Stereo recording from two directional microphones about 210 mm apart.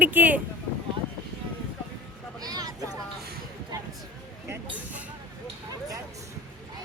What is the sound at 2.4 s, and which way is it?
Vehicle, 20° right (ahead or behind).